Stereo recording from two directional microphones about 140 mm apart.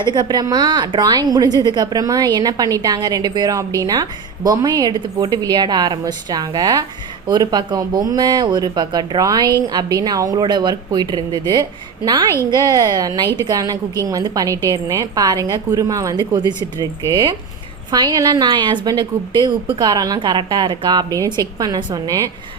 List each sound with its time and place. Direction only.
0.0 s a woman's voice: 30° right (ahead or behind)
12.3 s a woman's voice: 20° left (ahead or behind)
12.5 s a woman's voice: 30° right (ahead or behind)